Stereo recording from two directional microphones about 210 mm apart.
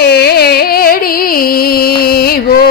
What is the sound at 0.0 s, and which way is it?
Music, 50° left (ahead or behind).